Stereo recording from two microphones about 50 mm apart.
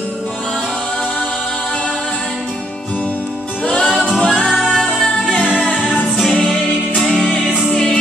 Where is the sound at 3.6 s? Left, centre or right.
Centre.